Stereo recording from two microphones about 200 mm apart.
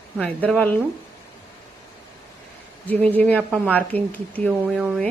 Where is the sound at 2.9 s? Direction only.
10° left (ahead or behind).